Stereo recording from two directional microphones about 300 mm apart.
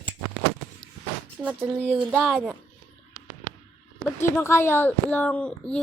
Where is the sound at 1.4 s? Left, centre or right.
Centre.